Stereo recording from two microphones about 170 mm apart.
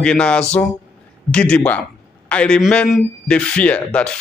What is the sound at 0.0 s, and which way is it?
Speech, 5° left (ahead or behind).